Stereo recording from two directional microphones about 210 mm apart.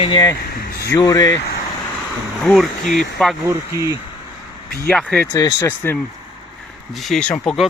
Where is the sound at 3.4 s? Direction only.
15° right (ahead or behind).